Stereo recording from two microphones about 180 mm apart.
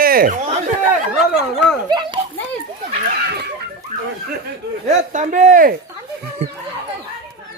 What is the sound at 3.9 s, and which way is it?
Snicker, 45° right (ahead or behind).